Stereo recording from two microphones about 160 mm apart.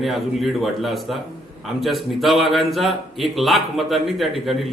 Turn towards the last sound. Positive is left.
turn(degrees=0)  # may be behind; listen again after turning